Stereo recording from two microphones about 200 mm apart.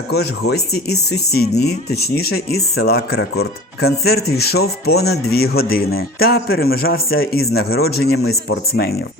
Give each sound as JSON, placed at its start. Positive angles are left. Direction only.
{"t": 0.1, "sound": "speech", "side_deg": 55}
{"t": 8.2, "sound": "speech", "side_deg": 90}